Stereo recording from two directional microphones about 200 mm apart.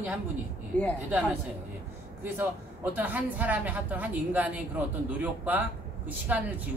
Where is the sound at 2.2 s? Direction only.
10° right (ahead or behind).